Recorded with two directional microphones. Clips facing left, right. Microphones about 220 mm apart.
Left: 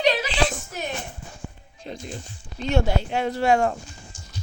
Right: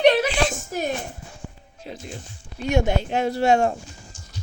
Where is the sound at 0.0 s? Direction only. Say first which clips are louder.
Right 5 dB; 60° right (ahead or behind).